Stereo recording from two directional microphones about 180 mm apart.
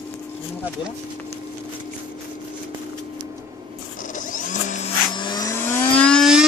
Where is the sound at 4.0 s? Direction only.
45° left (ahead or behind).